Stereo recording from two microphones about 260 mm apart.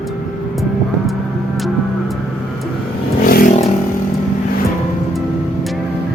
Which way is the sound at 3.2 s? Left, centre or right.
Left.